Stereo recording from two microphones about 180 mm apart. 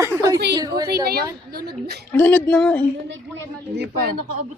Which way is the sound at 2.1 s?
10° left (ahead or behind).